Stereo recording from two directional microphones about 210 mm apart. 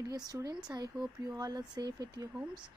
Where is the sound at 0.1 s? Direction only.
20° right (ahead or behind).